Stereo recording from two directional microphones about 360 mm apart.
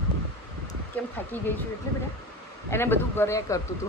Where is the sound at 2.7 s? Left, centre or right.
Centre.